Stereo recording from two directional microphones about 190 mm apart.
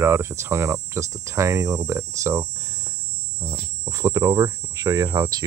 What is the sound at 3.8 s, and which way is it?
Speech, 15° right (ahead or behind).